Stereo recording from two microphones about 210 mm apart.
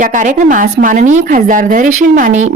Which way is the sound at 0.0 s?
40° right (ahead or behind).